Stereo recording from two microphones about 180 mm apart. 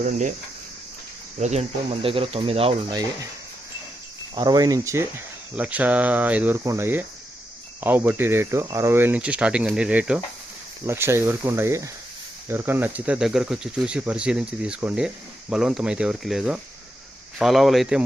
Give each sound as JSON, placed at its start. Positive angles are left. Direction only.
{"t": 0.0, "sound": "speech", "side_deg": -45}
{"t": 1.4, "sound": "speech", "side_deg": -40}
{"t": 4.4, "sound": "speech", "side_deg": -20}